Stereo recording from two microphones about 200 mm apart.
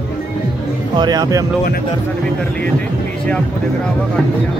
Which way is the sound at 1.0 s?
20° right (ahead or behind).